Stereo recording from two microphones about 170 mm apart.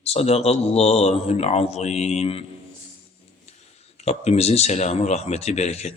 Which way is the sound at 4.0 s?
40° left (ahead or behind).